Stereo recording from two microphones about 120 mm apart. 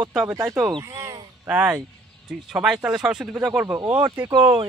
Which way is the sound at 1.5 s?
10° right (ahead or behind).